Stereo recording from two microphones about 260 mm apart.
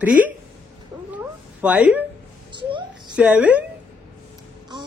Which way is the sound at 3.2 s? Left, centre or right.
Centre.